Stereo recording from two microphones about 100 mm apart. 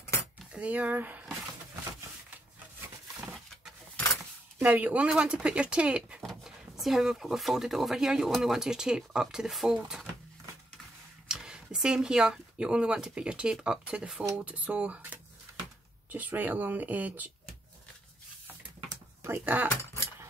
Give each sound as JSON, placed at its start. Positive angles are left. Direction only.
{"t": 0.5, "sound": "speech", "side_deg": -15}
{"t": 3.3, "sound": "a sound", "side_deg": 5}
{"t": 4.6, "sound": "speech", "side_deg": -15}
{"t": 11.2, "sound": "speech", "side_deg": -5}
{"t": 19.2, "sound": "speech", "side_deg": -20}
{"t": 19.8, "sound": "a sound", "side_deg": 30}